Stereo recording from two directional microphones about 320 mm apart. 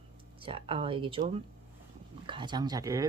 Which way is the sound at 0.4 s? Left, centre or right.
Centre.